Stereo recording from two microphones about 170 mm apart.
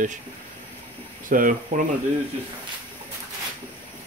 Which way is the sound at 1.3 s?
50° right (ahead or behind).